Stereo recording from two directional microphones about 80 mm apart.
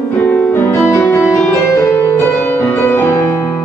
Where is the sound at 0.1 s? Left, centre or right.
Left.